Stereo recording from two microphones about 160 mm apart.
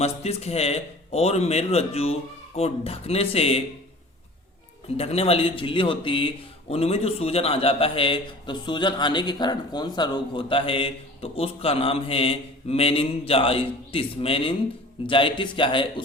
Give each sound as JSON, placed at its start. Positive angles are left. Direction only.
{"t": 0.0, "sound": "speech", "side_deg": 40}
{"t": 4.9, "sound": "speech", "side_deg": 40}